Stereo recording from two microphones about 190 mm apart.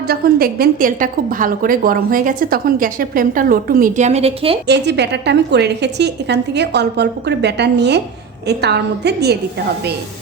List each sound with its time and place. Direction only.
0.1 s a woman's voice: 50° right (ahead or behind); by 4.5 s 35° right (ahead or behind)
4.6 s a woman's voice: 60° right (ahead or behind)